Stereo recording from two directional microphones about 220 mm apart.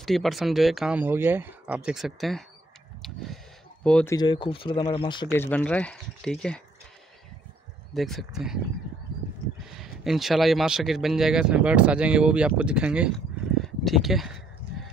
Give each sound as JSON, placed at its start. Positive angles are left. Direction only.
{"t": 0.0, "sound": "speech", "side_deg": 0}
{"t": 3.8, "sound": "speech", "side_deg": 5}
{"t": 5.3, "sound": "speech", "side_deg": 10}
{"t": 7.9, "sound": "speech", "side_deg": 0}
{"t": 9.7, "sound": "speech", "side_deg": 0}
{"t": 13.6, "sound": "a sound", "side_deg": 0}